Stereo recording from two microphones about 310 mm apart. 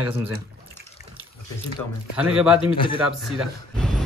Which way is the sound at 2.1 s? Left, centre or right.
Centre.